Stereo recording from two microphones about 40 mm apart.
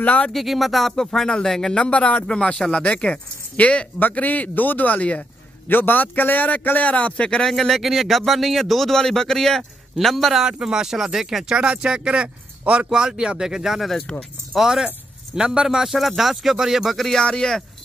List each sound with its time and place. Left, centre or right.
0.0 s speech: left
0.3 s speech: centre
0.9 s speech: centre
1.8 s a man's voice: left
7.2 s speech: left
7.4 s speech: centre
10.3 s speech: centre; by 12.8 s right
12.9 s a man's voice: centre
15.9 s speech: centre
16.9 s speech: centre